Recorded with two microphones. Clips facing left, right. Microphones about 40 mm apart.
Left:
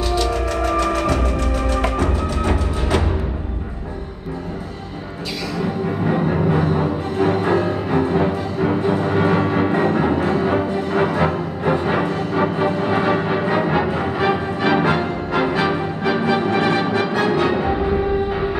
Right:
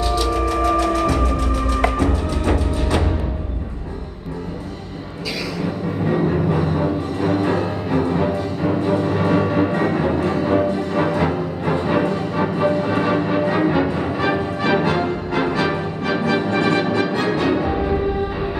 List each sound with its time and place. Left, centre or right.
0.2 s music: centre
6.0 s a sound: centre
6.6 s music: left; by 17.6 s centre